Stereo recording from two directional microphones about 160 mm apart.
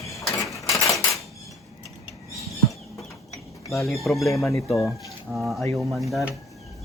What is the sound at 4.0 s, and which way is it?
Speech, centre (ahead or behind).